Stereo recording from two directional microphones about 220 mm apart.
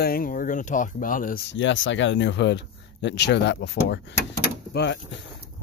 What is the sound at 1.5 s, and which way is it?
Speech, 60° left (ahead or behind).